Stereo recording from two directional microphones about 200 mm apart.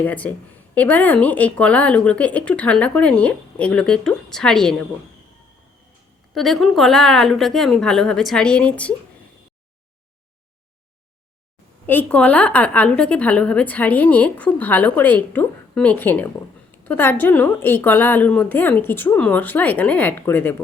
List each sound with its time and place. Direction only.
0.0 s a woman's voice: 10° left (ahead or behind)
6.3 s a woman's voice: centre (ahead or behind)
11.9 s a woman's voice: 5° left (ahead or behind)